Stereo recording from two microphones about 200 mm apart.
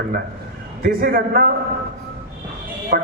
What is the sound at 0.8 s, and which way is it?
Speech, 45° right (ahead or behind).